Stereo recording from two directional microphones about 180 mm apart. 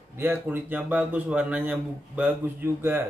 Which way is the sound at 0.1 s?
10° right (ahead or behind).